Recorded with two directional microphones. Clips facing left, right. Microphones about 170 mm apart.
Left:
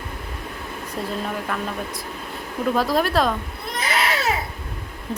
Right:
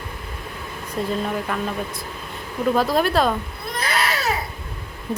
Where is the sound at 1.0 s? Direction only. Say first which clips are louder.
Right 4 dB; centre (ahead or behind).